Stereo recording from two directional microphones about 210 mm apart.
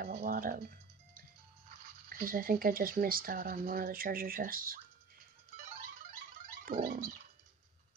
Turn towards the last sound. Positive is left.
turn(degrees=-40)  # may be behind; listen again after turning